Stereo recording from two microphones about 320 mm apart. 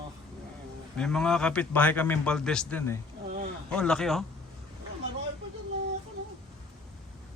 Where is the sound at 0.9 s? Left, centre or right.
Centre.